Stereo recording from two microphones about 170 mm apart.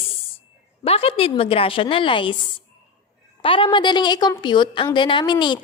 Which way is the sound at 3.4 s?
30° left (ahead or behind).